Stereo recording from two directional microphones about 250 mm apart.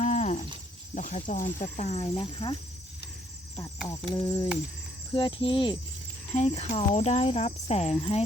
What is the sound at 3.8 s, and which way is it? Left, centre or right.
Cricket, centre.